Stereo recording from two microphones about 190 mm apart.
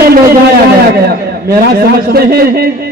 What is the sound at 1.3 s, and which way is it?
A man's voice, 55° right (ahead or behind).